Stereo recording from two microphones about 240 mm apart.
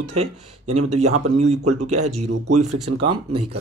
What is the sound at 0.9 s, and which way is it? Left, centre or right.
Speech, right.